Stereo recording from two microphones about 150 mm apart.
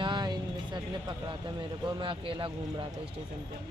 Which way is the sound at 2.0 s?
35° right (ahead or behind).